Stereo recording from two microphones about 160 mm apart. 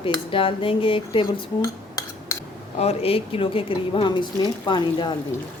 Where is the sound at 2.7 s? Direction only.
40° left (ahead or behind).